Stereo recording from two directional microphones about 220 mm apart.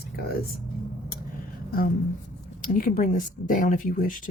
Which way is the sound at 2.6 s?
40° left (ahead or behind).